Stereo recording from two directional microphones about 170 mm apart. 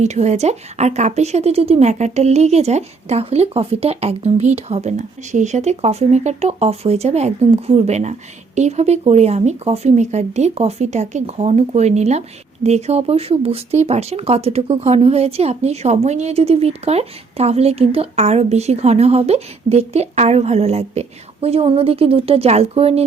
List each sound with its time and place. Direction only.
0.0 s speech: 40° right (ahead or behind)